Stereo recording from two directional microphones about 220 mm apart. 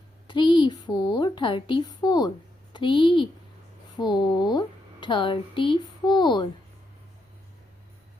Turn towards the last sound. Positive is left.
turn(degrees=20)  # may be behind; listen again after turning